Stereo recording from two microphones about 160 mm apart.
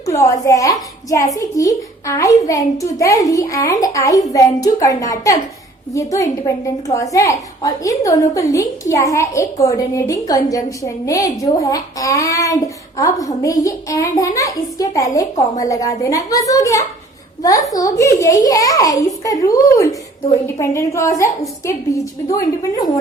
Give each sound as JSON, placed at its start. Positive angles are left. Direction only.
{"t": 0.0, "sound": "a woman's voice", "side_deg": 20}